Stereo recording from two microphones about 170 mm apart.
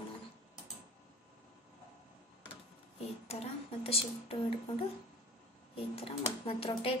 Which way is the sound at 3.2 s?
35° left (ahead or behind).